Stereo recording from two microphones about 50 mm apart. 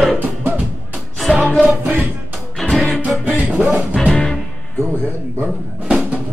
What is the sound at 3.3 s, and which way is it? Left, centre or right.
Music, right.